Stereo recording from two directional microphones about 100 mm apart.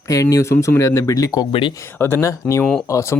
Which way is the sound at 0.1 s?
35° left (ahead or behind).